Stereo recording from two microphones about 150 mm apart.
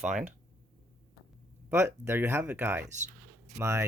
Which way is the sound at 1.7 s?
15° right (ahead or behind).